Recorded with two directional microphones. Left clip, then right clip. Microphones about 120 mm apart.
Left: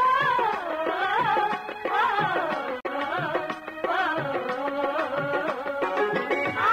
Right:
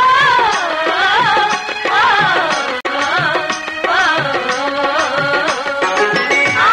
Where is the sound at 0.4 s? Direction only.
30° left (ahead or behind).